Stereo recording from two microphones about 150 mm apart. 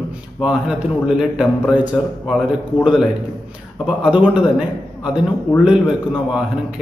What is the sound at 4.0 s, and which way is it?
A man's voice, 5° right (ahead or behind).